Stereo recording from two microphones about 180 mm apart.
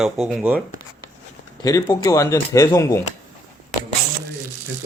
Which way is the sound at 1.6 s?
20° left (ahead or behind).